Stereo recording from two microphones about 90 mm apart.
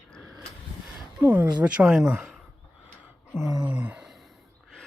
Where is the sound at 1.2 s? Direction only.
20° right (ahead or behind).